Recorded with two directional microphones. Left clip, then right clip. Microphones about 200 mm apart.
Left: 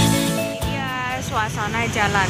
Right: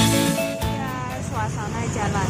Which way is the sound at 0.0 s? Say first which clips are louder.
Even; centre (ahead or behind).